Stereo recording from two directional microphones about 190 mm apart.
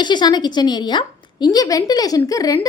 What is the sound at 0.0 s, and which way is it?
A woman's voice, 25° left (ahead or behind).